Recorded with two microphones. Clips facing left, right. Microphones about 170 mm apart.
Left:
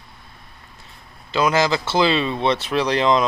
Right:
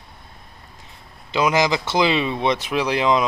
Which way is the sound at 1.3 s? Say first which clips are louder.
Even; 15° right (ahead or behind).